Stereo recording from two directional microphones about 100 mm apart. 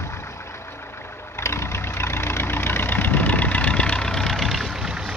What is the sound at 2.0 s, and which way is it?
Vehicle, 25° left (ahead or behind).